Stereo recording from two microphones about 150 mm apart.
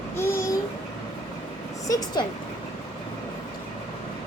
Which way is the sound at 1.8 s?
25° left (ahead or behind).